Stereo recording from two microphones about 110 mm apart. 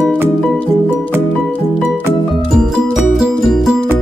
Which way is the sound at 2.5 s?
5° right (ahead or behind).